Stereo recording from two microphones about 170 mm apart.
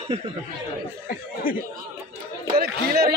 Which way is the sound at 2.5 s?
65° right (ahead or behind).